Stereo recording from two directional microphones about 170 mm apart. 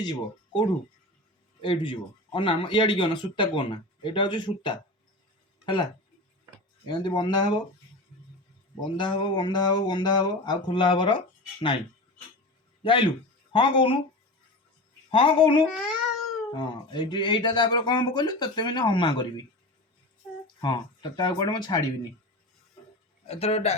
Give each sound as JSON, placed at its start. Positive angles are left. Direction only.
{"t": 0.0, "sound": "speech", "side_deg": 25}
{"t": 1.6, "sound": "speech", "side_deg": 30}
{"t": 8.8, "sound": "speech", "side_deg": 25}
{"t": 12.8, "sound": "speech", "side_deg": 30}
{"t": 15.1, "sound": "speech", "side_deg": 30}
{"t": 20.6, "sound": "speech", "side_deg": 25}
{"t": 23.2, "sound": "speech", "side_deg": 35}